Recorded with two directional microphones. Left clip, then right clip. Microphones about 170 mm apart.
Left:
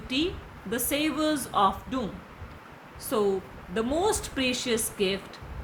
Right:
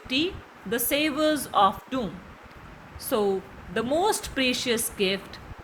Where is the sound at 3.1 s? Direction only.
20° right (ahead or behind).